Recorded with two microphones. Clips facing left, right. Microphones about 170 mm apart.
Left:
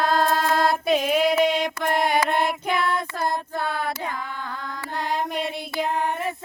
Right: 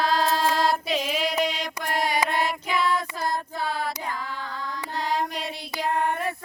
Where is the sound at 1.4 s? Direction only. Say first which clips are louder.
Left 6 dB; 55° left (ahead or behind).